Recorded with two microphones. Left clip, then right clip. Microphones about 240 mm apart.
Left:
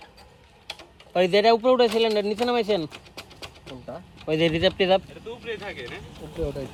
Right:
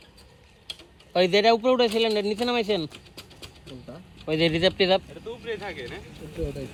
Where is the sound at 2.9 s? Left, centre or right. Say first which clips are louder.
Left 3 dB; left.